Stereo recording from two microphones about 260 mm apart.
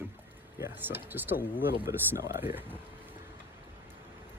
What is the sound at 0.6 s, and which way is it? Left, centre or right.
Speech, centre.